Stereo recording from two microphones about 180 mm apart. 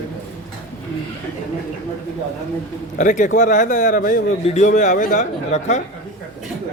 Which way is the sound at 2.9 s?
45° left (ahead or behind).